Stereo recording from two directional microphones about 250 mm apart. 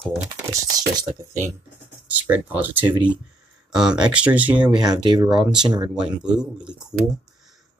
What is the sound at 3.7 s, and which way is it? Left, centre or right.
Speech, centre.